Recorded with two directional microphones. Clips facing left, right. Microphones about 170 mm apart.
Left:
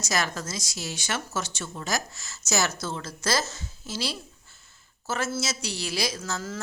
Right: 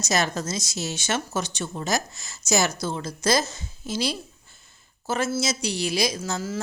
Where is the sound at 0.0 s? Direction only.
25° right (ahead or behind).